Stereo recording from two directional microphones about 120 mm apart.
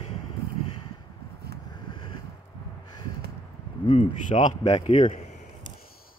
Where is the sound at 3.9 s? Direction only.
90° left; by 5.4 s 70° left (ahead or behind).